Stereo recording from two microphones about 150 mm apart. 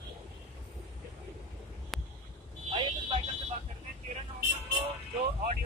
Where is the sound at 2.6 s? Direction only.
35° right (ahead or behind).